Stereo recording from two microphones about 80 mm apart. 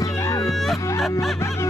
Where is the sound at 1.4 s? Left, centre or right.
Left.